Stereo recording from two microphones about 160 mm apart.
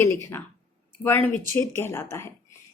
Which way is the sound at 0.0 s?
15° left (ahead or behind).